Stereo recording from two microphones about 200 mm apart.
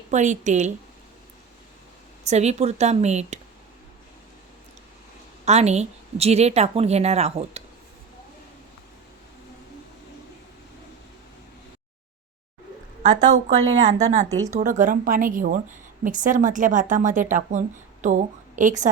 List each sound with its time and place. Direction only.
0.1 s a woman's voice: 35° right (ahead or behind)
2.2 s a woman's voice: 35° right (ahead or behind)
5.5 s a woman's voice: 35° right (ahead or behind)
13.3 s speech: 90° right
14.0 s a woman's voice: 35° right (ahead or behind)
14.3 s speech: 15° right (ahead or behind)
14.5 s a woman's voice: 40° right (ahead or behind)